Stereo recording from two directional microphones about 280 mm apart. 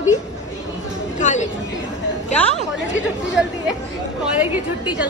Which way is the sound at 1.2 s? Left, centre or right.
Left.